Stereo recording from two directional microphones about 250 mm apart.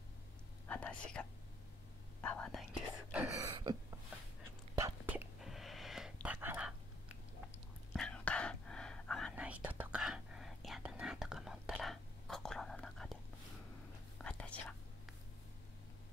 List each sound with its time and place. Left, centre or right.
0.7 s whispering: centre
2.2 s whispering: centre
4.7 s whispering: centre
7.9 s whispering: centre